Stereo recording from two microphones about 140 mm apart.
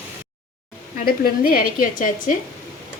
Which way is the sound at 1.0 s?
90° left.